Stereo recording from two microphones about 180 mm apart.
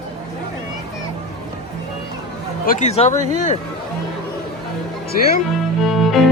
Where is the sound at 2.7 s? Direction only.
40° left (ahead or behind).